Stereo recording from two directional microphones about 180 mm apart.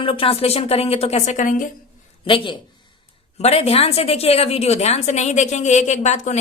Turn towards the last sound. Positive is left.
turn(degrees=40)  # may be behind; listen again after turning